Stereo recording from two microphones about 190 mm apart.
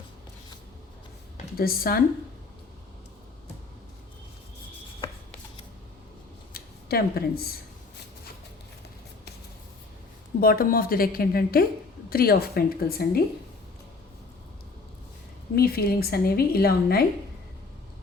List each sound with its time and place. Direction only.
1.5 s a woman's voice: 50° left (ahead or behind)
6.5 s a sound: 50° left (ahead or behind)
10.4 s a woman's voice: 50° left (ahead or behind)
15.5 s a woman's voice: 55° left (ahead or behind)